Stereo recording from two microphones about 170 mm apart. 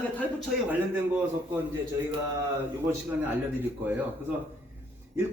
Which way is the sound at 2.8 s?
10° right (ahead or behind).